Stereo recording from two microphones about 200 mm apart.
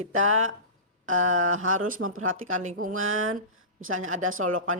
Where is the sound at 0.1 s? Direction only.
90° right.